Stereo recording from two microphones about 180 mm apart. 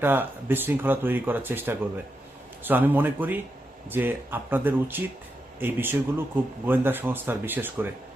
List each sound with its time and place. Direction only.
0.0 s a man's voice: 10° right (ahead or behind)